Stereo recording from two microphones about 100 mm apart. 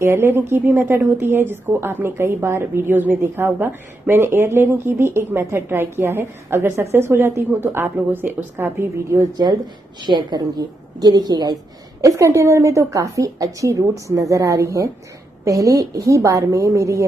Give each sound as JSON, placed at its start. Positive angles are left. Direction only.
{"t": 0.0, "sound": "a woman's voice", "side_deg": -25}
{"t": 10.0, "sound": "a woman's voice", "side_deg": -45}
{"t": 12.0, "sound": "a woman's voice", "side_deg": -35}